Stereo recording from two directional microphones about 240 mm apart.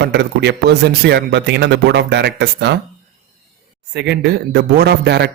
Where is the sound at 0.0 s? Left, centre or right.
Right.